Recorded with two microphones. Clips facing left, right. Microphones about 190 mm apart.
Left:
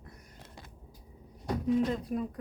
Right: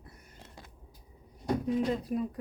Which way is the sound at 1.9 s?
Centre (ahead or behind).